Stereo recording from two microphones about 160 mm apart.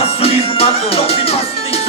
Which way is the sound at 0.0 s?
40° left (ahead or behind).